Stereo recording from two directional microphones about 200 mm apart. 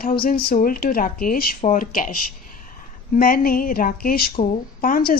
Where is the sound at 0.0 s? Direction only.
45° left (ahead or behind).